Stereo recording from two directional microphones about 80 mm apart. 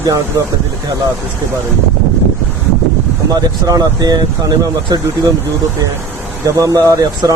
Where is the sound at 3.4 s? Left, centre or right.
Right.